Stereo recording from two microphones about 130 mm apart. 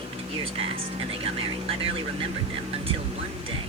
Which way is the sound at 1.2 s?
50° right (ahead or behind).